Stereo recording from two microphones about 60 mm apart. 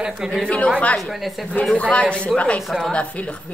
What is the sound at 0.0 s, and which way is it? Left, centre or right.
Speech, centre.